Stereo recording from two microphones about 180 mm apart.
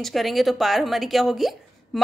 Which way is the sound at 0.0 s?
Centre (ahead or behind).